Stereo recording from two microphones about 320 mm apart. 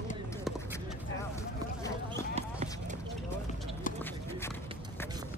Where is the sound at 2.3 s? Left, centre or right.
Right.